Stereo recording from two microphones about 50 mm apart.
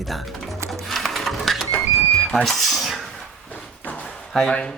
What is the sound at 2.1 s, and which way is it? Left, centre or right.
Speech, centre.